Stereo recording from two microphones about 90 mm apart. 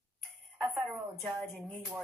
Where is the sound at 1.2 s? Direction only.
Centre (ahead or behind).